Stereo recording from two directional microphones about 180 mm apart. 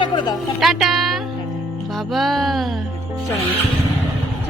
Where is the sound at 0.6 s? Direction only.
Centre (ahead or behind).